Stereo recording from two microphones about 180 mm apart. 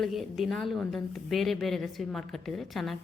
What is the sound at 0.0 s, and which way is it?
A woman's voice, centre (ahead or behind).